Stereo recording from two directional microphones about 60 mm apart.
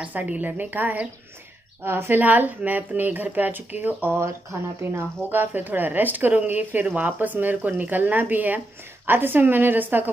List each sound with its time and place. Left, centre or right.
0.0 s speech: right
2.2 s speech: right
4.2 s speech: right
5.3 s speech: right